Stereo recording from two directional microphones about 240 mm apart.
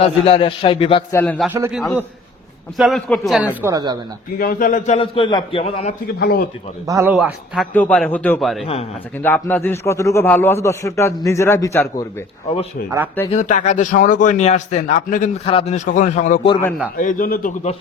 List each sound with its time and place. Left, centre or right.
0.0 s a man's voice: left
1.1 s a man's voice: centre
1.5 s a man's voice: centre
4.4 s a man's voice: left
6.1 s a man's voice: left
6.8 s a man's voice: centre
8.6 s a man's voice: left
9.2 s a man's voice: centre
13.3 s a man's voice: left
16.5 s a man's voice: centre
17.0 s a man's voice: left